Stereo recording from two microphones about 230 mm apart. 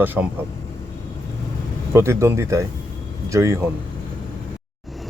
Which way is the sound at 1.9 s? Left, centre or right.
Centre.